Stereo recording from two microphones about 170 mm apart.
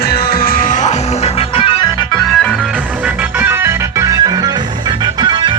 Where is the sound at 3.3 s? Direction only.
10° right (ahead or behind).